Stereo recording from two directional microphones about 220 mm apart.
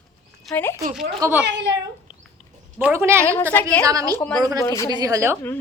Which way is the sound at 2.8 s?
10° right (ahead or behind).